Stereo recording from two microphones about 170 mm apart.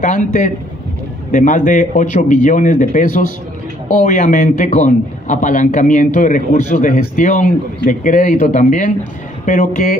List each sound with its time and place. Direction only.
0.0 s a man's voice: 50° left (ahead or behind)